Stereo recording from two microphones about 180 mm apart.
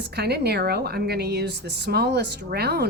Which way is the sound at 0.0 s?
65° right (ahead or behind).